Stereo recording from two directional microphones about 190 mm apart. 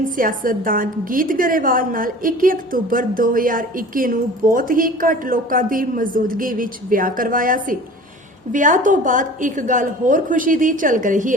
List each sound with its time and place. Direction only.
0.2 s a woman's voice: 45° right (ahead or behind)